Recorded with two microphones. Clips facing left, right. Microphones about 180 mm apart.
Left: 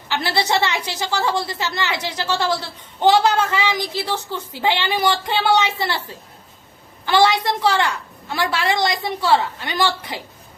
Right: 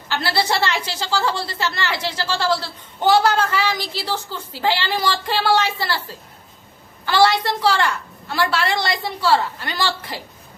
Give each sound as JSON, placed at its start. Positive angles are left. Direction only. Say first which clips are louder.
{"t": 0.1, "sound": "a woman's voice", "louder": "left 1 dB", "side_deg": 20}
{"t": 7.0, "sound": "a woman's voice", "louder": "even", "side_deg": 15}